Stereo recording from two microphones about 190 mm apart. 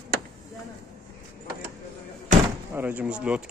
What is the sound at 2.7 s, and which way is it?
Speech, 10° right (ahead or behind).